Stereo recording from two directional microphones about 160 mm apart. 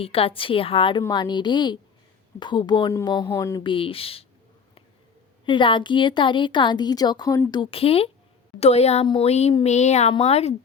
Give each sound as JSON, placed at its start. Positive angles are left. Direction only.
{"t": 0.0, "sound": "a woman's voice", "side_deg": 35}
{"t": 3.6, "sound": "a woman's voice", "side_deg": 35}
{"t": 5.5, "sound": "a woman's voice", "side_deg": 30}